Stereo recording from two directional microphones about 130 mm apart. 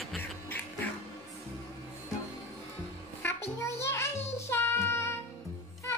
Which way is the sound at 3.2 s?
20° left (ahead or behind).